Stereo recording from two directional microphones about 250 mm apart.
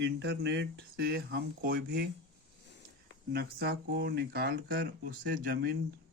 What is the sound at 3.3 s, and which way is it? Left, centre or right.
Speech, right.